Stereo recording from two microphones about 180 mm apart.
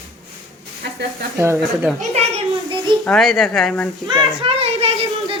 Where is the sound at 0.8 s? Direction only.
70° right (ahead or behind).